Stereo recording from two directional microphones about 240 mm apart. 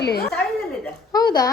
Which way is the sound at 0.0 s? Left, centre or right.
Left.